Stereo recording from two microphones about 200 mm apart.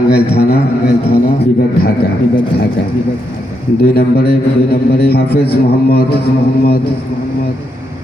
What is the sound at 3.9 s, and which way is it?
A man's voice, 50° left (ahead or behind).